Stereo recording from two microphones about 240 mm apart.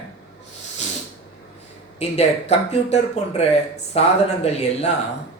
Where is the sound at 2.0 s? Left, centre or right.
Left.